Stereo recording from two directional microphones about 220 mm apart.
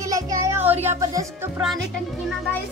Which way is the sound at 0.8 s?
15° right (ahead or behind).